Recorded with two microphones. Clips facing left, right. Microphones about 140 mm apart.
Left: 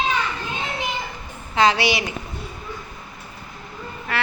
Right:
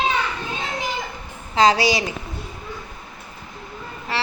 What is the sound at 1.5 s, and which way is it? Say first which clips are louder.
Speech: right 2 dB; 35° right (ahead or behind).